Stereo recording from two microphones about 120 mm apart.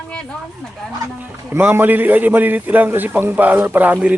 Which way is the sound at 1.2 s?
20° right (ahead or behind).